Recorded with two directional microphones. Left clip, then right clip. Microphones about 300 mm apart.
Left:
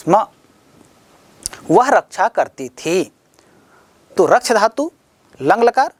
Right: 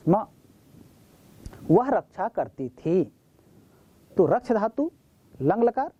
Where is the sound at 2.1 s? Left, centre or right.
Centre.